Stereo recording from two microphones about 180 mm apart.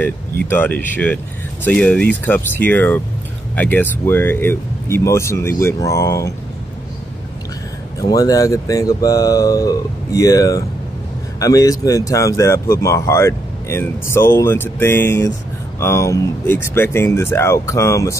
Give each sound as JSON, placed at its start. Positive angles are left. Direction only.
{"t": 0.5, "sound": "speech", "side_deg": 10}
{"t": 8.0, "sound": "speech", "side_deg": 20}